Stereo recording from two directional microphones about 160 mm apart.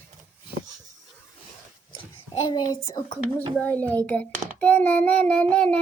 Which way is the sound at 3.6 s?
10° left (ahead or behind).